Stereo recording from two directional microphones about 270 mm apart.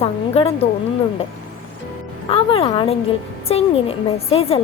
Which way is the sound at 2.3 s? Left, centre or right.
Centre.